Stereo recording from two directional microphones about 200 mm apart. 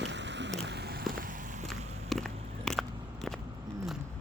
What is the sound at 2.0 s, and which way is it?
Biting, centre (ahead or behind).